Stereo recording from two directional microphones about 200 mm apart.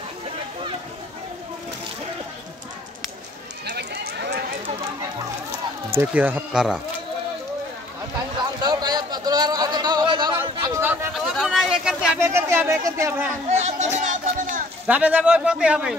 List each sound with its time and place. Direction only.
3.6 s run: 55° right (ahead or behind)
5.9 s speech: 10° right (ahead or behind)
8.6 s a sound: 20° right (ahead or behind); by 12.2 s centre (ahead or behind)
12.2 s speech: 15° right (ahead or behind)
13.5 s speech: 35° right (ahead or behind)
14.9 s speech: 5° right (ahead or behind)